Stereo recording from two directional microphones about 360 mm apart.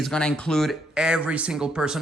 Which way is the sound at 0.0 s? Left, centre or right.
Centre.